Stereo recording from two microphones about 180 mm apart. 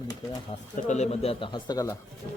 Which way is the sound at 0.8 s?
40° left (ahead or behind).